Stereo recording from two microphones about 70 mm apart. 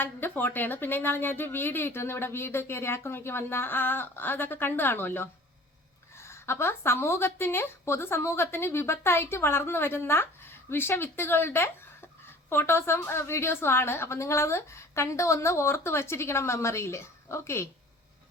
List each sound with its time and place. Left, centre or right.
0.0 s a woman's voice: left